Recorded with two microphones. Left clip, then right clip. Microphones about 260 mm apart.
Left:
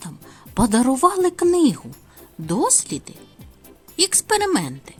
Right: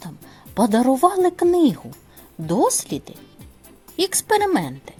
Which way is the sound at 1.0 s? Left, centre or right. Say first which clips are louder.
Left 1 dB; left.